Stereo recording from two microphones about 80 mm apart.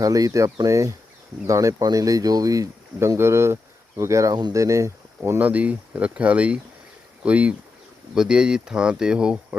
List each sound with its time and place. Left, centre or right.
0.0 s speech: right
3.2 s speech: right
5.4 s speech: centre